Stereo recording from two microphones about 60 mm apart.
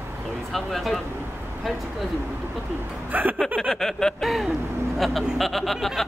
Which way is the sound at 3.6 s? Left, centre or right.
Centre.